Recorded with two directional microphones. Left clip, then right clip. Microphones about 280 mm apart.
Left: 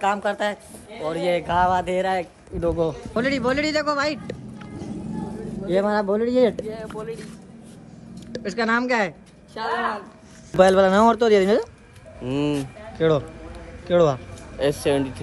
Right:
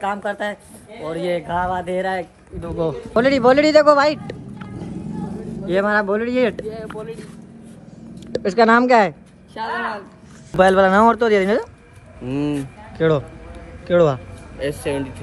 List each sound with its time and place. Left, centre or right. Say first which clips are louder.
0.0 s speech: left 1 dB; centre
2.5 s speech: left 7 dB; left
3.2 s speech: right 9 dB; centre
8.3 s a woman's voice: right 9 dB; centre
14.9 s speech: left 2 dB; left